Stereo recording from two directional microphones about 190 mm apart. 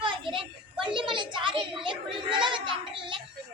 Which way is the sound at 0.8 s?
25° right (ahead or behind).